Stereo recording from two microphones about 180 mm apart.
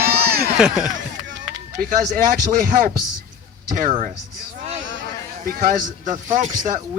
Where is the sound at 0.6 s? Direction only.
5° right (ahead or behind).